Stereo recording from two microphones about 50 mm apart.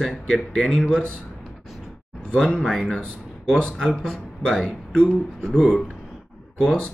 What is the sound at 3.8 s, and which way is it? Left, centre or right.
Speech, centre.